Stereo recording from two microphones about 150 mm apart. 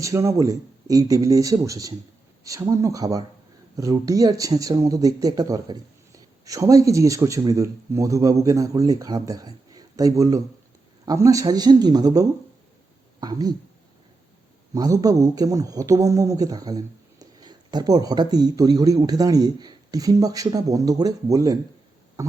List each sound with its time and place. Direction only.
0.0 s speech: 20° right (ahead or behind)
14.7 s speech: 25° right (ahead or behind)